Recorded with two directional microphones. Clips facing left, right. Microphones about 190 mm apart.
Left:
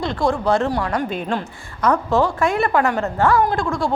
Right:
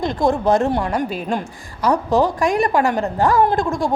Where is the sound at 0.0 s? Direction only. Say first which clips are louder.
Right 2 dB; 20° right (ahead or behind).